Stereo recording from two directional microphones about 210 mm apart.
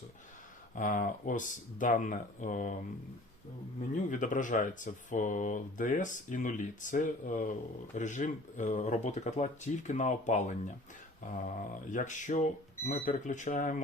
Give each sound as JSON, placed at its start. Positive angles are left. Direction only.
{"t": 0.8, "sound": "speech", "side_deg": 40}
{"t": 4.1, "sound": "speech", "side_deg": 40}